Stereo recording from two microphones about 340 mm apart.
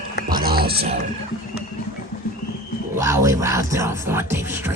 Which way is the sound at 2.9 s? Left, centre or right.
Centre.